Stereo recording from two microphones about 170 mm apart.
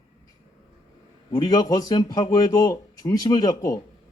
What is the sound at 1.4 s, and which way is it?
A man's voice, 25° left (ahead or behind).